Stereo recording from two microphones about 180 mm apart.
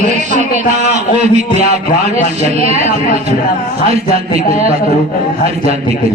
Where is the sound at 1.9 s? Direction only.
45° left (ahead or behind).